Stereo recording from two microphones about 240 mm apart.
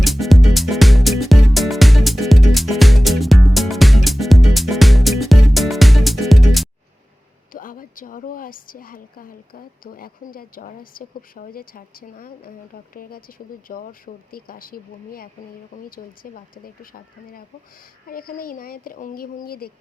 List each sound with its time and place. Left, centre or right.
0.0 s music: centre
7.5 s speech: left